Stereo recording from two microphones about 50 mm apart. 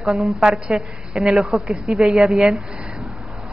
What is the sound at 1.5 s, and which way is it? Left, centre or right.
Speech, centre.